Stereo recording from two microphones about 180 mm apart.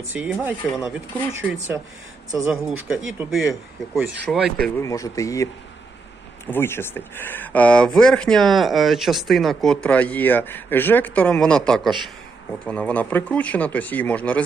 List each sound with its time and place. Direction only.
0.1 s speech: 5° right (ahead or behind)
2.4 s speech: 5° right (ahead or behind)
4.6 s speech: 15° left (ahead or behind)